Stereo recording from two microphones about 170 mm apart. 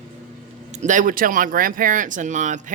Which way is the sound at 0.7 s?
45° right (ahead or behind).